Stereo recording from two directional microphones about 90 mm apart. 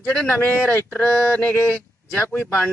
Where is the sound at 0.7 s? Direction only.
20° left (ahead or behind).